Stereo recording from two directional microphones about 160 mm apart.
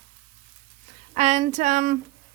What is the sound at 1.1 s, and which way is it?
Speech, 45° right (ahead or behind).